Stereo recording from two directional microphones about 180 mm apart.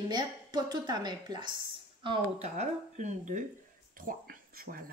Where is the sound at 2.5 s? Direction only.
40° right (ahead or behind).